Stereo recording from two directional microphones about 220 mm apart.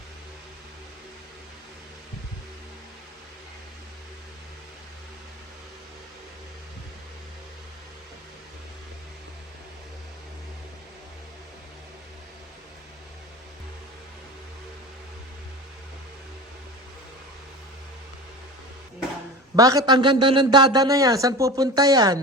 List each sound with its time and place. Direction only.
19.5 s a man's voice: 15° right (ahead or behind)